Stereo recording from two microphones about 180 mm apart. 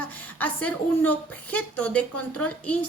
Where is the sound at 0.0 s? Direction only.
10° left (ahead or behind).